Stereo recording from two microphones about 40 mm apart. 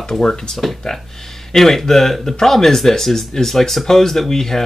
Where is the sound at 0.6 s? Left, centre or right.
Centre.